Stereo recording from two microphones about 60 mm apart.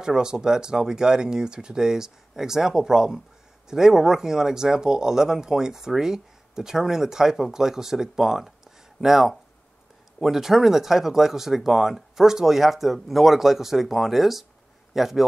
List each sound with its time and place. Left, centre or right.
0.0 s speech: centre